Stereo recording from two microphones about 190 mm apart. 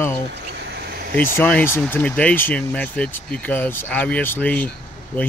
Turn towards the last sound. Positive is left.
turn(degrees=10)  # may be behind; listen again after turning